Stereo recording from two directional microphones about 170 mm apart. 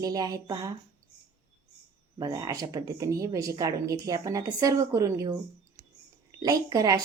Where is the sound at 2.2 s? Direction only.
20° right (ahead or behind).